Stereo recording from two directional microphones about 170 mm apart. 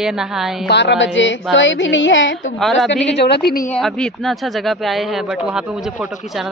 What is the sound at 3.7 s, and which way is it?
Speech, 5° left (ahead or behind).